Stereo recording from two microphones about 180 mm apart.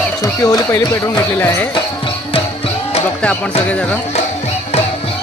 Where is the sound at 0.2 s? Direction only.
15° left (ahead or behind).